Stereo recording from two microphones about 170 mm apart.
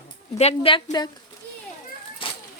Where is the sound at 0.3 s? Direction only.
35° left (ahead or behind).